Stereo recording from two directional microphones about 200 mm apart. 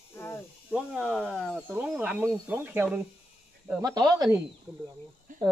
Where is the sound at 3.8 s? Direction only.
20° right (ahead or behind).